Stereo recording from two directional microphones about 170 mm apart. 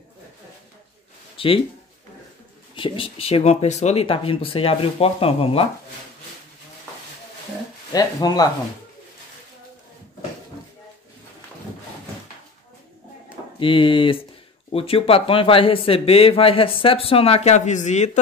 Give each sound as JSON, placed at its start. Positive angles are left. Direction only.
{"t": 1.3, "sound": "a sound", "side_deg": 30}
{"t": 2.7, "sound": "speech", "side_deg": 30}
{"t": 7.9, "sound": "speech", "side_deg": 20}
{"t": 13.6, "sound": "speech", "side_deg": 30}